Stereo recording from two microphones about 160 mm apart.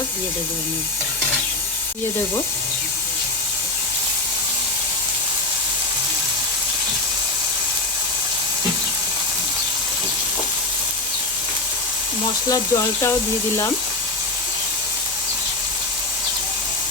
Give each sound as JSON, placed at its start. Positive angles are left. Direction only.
{"t": 12.5, "sound": "speech", "side_deg": 20}